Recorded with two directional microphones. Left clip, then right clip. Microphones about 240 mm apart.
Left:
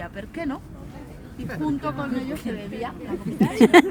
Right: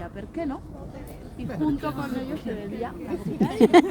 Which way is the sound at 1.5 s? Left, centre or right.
Left.